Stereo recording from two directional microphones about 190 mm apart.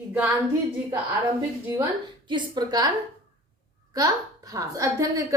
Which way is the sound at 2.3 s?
20° right (ahead or behind).